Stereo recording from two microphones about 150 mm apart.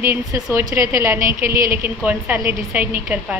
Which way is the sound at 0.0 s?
20° right (ahead or behind).